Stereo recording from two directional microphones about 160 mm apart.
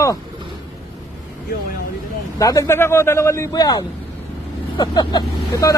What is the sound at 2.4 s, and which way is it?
Speech, 20° left (ahead or behind).